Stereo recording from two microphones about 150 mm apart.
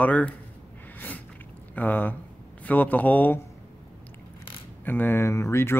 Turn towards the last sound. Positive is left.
turn(degrees=15)  # may be behind; listen again after turning